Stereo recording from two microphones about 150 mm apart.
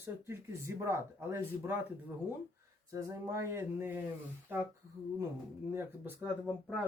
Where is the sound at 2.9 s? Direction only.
20° right (ahead or behind).